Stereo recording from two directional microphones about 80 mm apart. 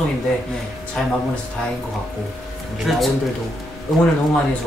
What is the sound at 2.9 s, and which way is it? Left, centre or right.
Music, centre.